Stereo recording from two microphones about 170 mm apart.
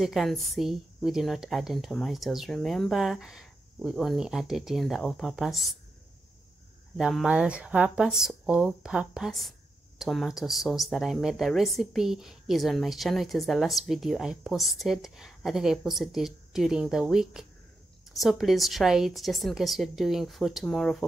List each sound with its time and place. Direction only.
0.0 s speech: centre (ahead or behind)
7.0 s speech: 5° right (ahead or behind)